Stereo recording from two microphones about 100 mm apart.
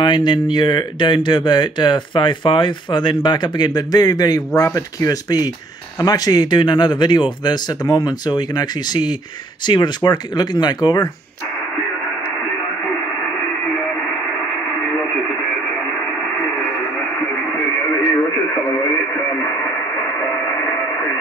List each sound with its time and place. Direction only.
0.0 s speech: 50° left (ahead or behind)